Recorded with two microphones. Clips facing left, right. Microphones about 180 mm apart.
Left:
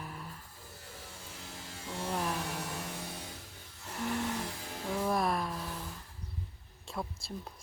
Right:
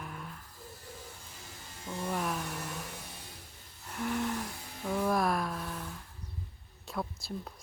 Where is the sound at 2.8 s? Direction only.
80° left.